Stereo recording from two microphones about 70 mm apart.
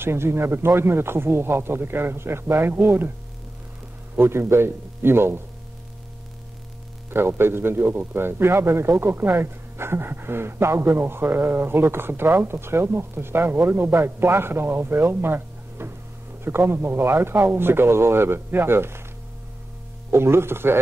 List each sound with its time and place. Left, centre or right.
0.0 s a man's voice: right
4.1 s a man's voice: right
7.1 s a man's voice: right
20.1 s a man's voice: right